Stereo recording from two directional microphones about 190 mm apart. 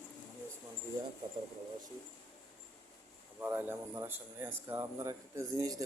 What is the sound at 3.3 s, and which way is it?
Speech, 10° right (ahead or behind).